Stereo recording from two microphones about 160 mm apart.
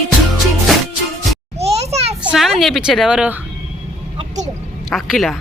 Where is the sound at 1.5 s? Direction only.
40° right (ahead or behind).